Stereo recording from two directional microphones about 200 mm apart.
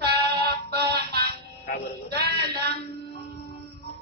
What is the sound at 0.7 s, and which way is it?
Music, 55° right (ahead or behind).